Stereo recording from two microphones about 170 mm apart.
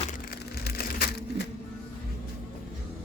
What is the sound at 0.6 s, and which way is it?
Crushing, 60° left (ahead or behind).